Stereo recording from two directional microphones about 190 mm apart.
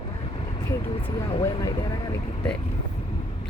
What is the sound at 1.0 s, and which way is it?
Speech, 25° left (ahead or behind).